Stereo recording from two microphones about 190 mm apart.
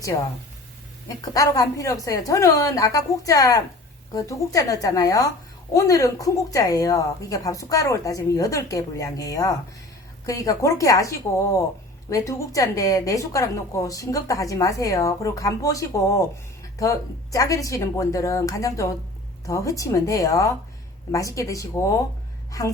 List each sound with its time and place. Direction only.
1.0 s a woman's voice: 20° left (ahead or behind)
12.1 s a woman's voice: 15° left (ahead or behind)